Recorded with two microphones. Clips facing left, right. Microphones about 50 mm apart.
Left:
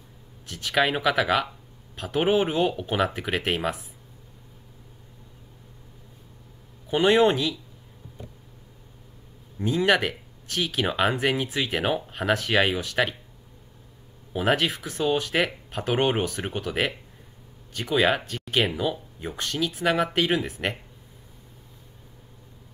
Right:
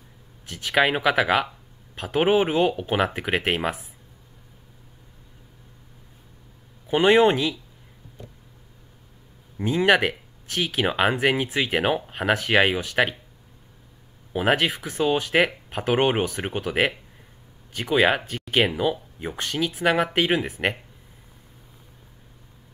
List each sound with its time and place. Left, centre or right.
0.5 s speech: centre
2.8 s speech: right
6.9 s speech: centre
9.6 s speech: centre
14.3 s speech: centre
15.9 s speech: centre